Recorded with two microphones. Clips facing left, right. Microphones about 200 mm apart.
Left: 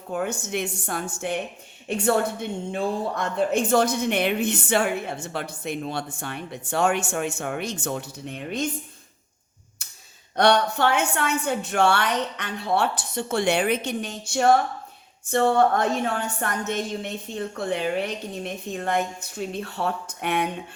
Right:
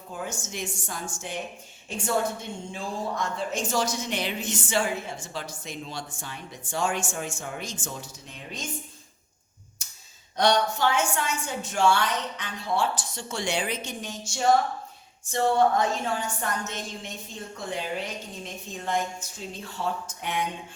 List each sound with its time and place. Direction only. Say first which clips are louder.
0.1 s a woman's voice: left 8 dB; 65° left (ahead or behind)
10.3 s a woman's voice: left 3 dB; 60° left (ahead or behind)